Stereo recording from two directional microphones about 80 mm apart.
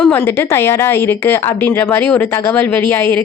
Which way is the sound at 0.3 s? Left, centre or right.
Left.